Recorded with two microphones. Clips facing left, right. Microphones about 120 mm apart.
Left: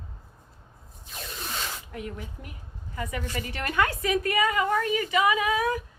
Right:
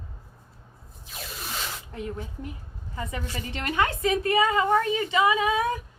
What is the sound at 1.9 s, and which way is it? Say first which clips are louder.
A woman's voice: right 2 dB; 30° right (ahead or behind).